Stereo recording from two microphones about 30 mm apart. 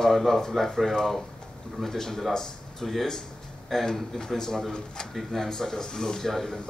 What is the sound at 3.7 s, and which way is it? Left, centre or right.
Speech, centre.